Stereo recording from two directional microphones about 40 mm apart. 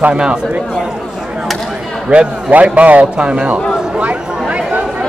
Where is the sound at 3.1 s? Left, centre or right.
Right.